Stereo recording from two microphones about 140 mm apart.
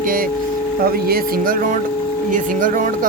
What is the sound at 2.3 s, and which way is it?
Speech, 70° right (ahead or behind).